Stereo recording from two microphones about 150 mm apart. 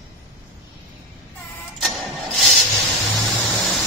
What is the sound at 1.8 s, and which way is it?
Vehicle, centre (ahead or behind).